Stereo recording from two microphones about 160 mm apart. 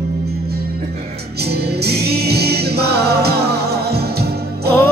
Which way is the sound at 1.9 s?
90° right.